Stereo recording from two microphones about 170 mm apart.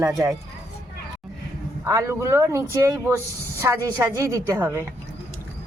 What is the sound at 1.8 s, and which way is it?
Speech, 15° right (ahead or behind).